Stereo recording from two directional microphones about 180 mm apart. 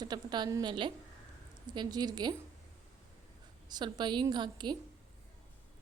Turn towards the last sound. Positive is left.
turn(degrees=-25)  # may be behind; listen again after turning